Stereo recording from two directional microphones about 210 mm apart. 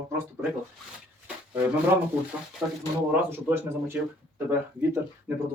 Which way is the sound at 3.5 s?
10° right (ahead or behind).